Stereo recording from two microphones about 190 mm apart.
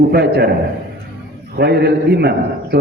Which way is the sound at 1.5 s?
60° right (ahead or behind).